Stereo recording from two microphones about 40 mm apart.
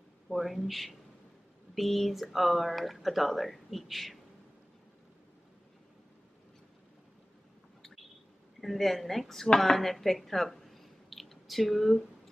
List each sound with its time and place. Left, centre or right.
0.3 s speech: centre
8.5 s speech: centre